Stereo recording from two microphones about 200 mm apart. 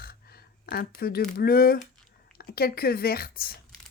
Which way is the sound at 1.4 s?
50° left (ahead or behind).